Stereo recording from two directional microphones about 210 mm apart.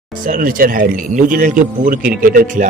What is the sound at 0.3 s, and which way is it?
A man's voice, 40° right (ahead or behind).